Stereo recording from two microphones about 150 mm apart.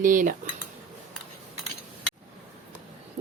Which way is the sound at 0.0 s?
60° right (ahead or behind).